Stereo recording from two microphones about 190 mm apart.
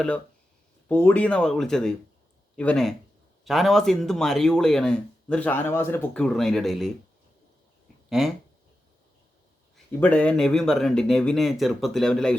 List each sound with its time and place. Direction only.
0.9 s speech: 10° left (ahead or behind)
8.2 s speech: centre (ahead or behind)
9.7 s speech: 5° left (ahead or behind)